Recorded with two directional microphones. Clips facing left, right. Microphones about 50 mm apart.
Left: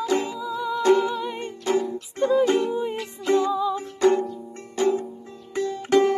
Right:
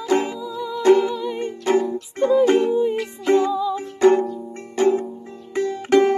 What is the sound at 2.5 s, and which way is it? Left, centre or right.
Music, right.